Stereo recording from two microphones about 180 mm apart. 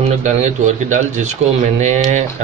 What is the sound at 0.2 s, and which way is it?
A man's voice, 40° right (ahead or behind).